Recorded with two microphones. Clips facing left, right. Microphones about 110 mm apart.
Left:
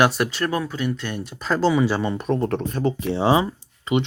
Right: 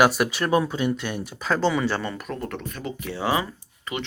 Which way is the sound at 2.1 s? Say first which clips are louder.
Left 9 dB; 25° left (ahead or behind).